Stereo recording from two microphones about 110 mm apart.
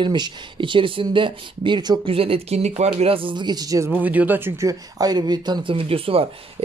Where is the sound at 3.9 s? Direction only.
15° right (ahead or behind).